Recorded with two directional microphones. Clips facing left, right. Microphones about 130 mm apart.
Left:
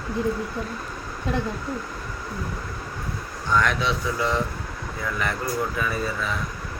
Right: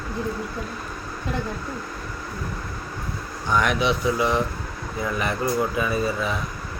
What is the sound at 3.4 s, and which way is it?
Speech, 15° right (ahead or behind).